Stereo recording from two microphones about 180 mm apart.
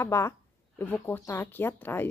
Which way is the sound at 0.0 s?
15° left (ahead or behind).